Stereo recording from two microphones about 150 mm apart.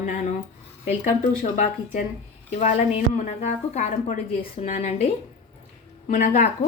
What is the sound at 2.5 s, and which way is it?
A woman's voice, 50° left (ahead or behind).